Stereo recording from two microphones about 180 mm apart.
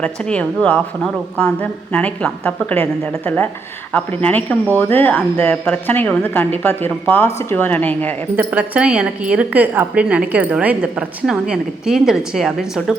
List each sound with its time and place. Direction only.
0.0 s speech: 5° left (ahead or behind)
8.4 s a woman's voice: 10° right (ahead or behind)